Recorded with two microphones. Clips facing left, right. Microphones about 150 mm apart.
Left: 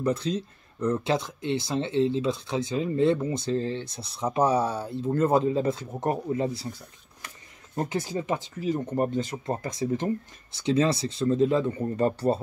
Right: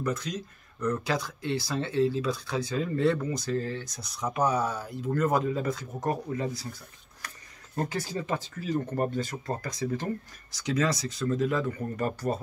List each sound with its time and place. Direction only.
0.0 s speech: 30° left (ahead or behind)
7.7 s speech: 20° left (ahead or behind)